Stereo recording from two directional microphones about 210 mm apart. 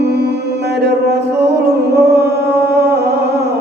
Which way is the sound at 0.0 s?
50° right (ahead or behind).